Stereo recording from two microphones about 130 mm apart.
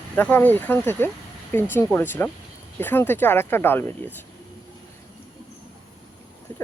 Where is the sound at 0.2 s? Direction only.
15° left (ahead or behind).